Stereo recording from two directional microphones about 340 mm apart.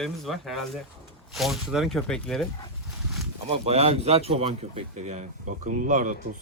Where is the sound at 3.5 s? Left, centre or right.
Centre.